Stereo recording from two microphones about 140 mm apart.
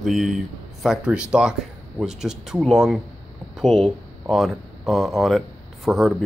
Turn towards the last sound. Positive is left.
turn(degrees=0)  # may be behind; listen again after turning